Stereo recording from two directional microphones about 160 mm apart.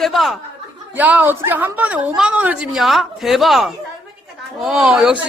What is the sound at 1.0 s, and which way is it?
Speech, 10° right (ahead or behind).